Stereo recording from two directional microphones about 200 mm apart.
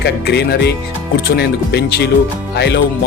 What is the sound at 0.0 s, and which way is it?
Speech, 55° left (ahead or behind).